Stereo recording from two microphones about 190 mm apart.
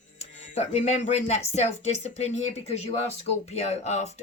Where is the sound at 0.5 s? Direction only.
35° left (ahead or behind).